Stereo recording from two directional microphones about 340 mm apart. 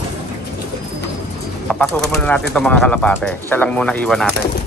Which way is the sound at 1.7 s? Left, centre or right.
Centre.